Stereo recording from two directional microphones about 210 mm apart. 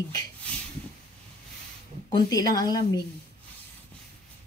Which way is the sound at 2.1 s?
20° left (ahead or behind).